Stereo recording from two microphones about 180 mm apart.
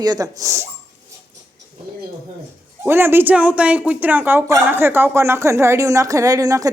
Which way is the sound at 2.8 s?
10° right (ahead or behind).